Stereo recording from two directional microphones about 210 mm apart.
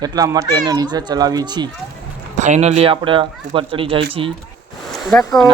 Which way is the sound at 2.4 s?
35° right (ahead or behind).